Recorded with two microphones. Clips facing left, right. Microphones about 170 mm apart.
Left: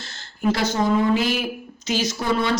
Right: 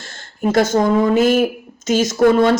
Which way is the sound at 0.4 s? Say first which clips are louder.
Right 6 dB; 45° right (ahead or behind).